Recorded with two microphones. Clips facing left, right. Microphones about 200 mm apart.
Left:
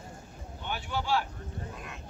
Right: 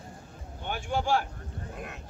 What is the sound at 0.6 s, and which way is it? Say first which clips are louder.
Speech: right 4 dB; 50° right (ahead or behind).